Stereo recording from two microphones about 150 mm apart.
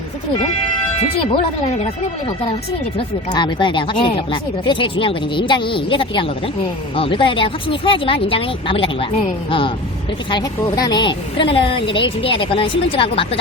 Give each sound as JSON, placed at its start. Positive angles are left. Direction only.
{"t": 1.1, "sound": "a woman's voice", "side_deg": 35}
{"t": 3.3, "sound": "a woman's voice", "side_deg": 30}